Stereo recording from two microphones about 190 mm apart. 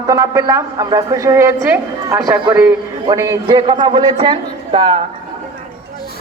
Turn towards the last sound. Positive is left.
turn(degrees=-30)  # may be behind; listen again after turning